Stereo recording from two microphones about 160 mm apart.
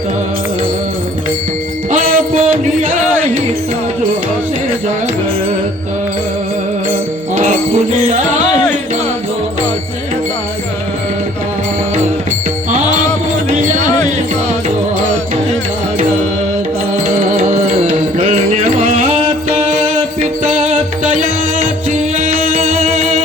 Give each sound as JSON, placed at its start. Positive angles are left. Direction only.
{"t": 1.9, "sound": "music", "side_deg": -55}
{"t": 7.3, "sound": "music", "side_deg": -45}
{"t": 12.7, "sound": "music", "side_deg": -50}
{"t": 18.2, "sound": "music", "side_deg": -40}
{"t": 21.0, "sound": "music", "side_deg": -55}